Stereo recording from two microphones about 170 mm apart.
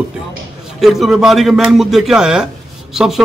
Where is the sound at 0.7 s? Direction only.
Centre (ahead or behind).